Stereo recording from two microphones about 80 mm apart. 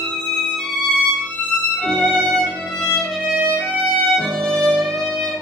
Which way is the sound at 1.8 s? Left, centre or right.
Centre.